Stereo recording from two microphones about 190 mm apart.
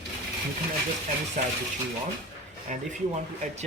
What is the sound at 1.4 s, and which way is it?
Mechanisms, 40° right (ahead or behind).